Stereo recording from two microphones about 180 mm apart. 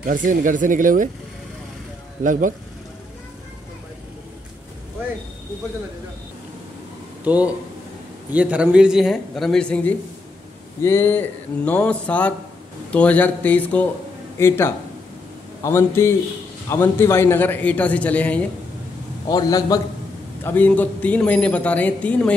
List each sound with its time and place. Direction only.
0.0 s speech: 50° right (ahead or behind)
7.2 s a man's voice: 10° right (ahead or behind); by 18.4 s 10° left (ahead or behind)
19.2 s a man's voice: 20° left (ahead or behind)
20.4 s a man's voice: 10° left (ahead or behind)